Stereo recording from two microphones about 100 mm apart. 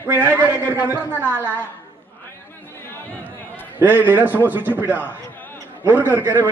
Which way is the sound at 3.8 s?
20° right (ahead or behind).